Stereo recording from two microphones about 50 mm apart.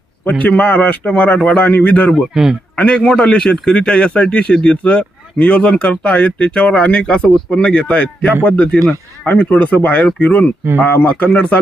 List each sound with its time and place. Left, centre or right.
0.3 s a man's voice: left
1.4 s a man's voice: centre
1.6 s a man's voice: left
2.3 s a man's voice: centre
2.7 s a man's voice: left